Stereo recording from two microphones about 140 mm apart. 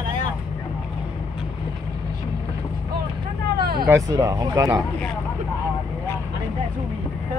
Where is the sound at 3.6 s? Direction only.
90° right.